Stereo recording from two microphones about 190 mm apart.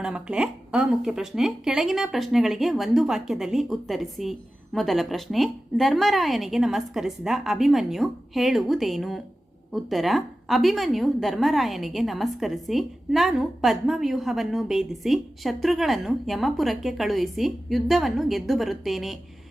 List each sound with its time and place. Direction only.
0.0 s a woman's voice: 5° right (ahead or behind)